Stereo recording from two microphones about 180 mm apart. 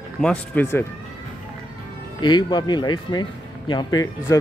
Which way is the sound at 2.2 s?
25° left (ahead or behind).